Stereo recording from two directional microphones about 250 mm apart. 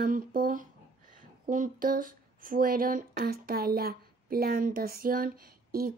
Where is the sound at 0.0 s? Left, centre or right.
Right.